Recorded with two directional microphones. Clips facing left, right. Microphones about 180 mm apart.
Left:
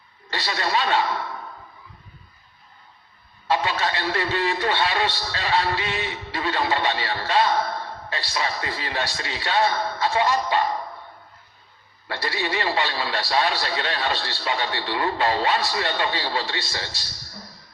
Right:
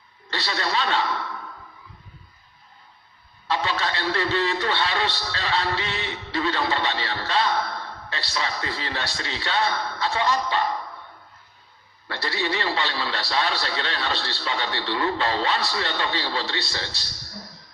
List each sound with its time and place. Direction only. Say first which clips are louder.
0.3 s a man's voice: left 2 dB; 15° left (ahead or behind)
3.5 s a man's voice: left 2 dB; 15° left (ahead or behind)
9.6 s speech: left 3 dB; 45° left (ahead or behind)
10.2 s a man's voice: left 2 dB; 15° left (ahead or behind)
12.0 s a man's voice: even; 15° left (ahead or behind)